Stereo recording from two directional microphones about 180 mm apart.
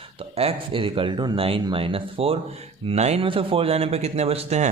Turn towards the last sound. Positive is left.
turn(degrees=-35)  # may be behind; listen again after turning